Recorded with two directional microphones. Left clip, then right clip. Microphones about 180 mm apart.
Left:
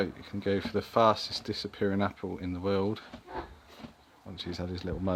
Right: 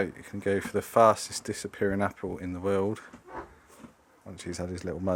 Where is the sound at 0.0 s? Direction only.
15° right (ahead or behind).